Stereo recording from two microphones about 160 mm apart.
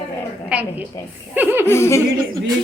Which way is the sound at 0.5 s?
10° right (ahead or behind).